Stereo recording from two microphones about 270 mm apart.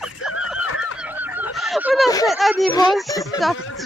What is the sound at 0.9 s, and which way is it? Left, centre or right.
Goose, centre.